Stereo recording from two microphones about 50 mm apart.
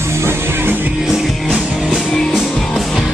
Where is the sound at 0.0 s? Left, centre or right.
Right.